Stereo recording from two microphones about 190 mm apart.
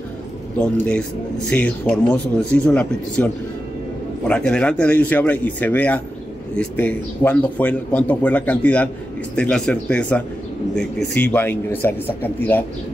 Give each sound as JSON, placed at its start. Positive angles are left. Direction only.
{"t": 0.6, "sound": "speech", "side_deg": 5}